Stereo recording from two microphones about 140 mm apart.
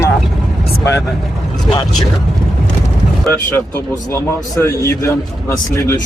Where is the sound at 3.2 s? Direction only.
20° left (ahead or behind).